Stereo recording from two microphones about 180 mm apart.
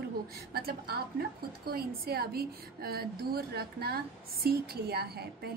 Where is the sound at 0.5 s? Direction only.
60° right (ahead or behind).